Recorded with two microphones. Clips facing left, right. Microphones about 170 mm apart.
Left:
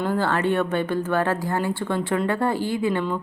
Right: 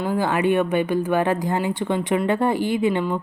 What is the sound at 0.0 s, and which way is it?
Speech, 10° right (ahead or behind).